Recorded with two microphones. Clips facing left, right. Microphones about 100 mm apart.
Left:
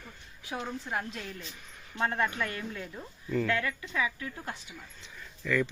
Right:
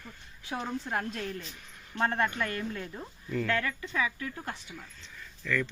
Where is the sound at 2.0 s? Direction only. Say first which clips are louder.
Right 1 dB; 5° left (ahead or behind).